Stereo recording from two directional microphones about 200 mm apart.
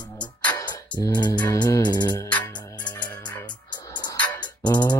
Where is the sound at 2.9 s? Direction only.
5° left (ahead or behind).